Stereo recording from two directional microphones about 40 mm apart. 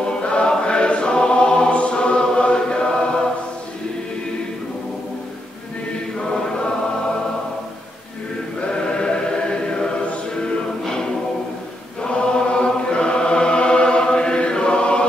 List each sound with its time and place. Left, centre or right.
0.0 s choir: left
8.5 s choir: left
12.0 s chant: left